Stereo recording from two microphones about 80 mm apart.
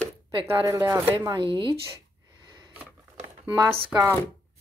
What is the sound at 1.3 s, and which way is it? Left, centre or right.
Speech, right.